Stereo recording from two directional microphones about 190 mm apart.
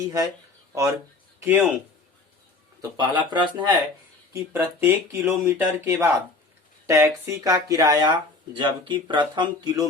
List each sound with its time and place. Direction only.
0.0 s a man's voice: 20° right (ahead or behind)
3.2 s speech: 25° right (ahead or behind)
4.3 s speech: 10° right (ahead or behind)